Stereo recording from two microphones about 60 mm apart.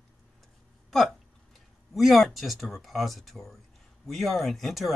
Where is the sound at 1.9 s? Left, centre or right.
Centre.